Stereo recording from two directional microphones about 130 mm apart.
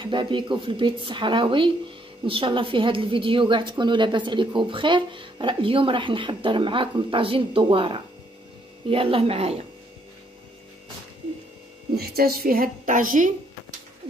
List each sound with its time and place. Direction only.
0.0 s a woman's voice: 40° right (ahead or behind)
12.4 s a woman's voice: 90° right